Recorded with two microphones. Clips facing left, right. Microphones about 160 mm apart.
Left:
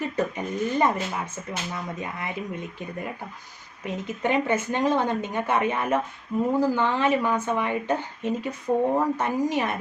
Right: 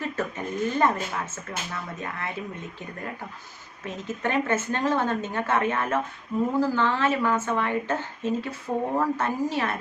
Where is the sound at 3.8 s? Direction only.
15° left (ahead or behind).